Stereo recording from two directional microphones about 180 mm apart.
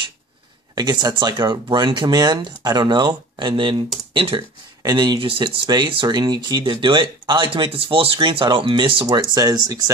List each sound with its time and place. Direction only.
0.7 s speech: 25° right (ahead or behind)